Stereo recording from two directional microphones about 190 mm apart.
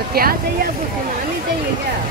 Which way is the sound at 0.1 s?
50° right (ahead or behind).